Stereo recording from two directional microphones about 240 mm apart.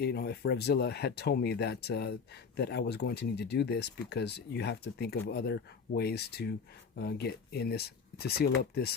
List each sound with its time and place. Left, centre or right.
0.0 s speech: left